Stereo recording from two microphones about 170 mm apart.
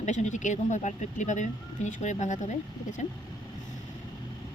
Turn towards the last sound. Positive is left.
turn(degrees=45)  # may be behind; listen again after turning